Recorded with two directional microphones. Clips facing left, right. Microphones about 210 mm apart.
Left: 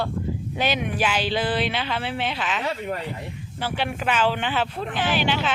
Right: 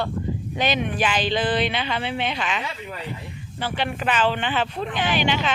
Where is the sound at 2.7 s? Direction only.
55° left (ahead or behind).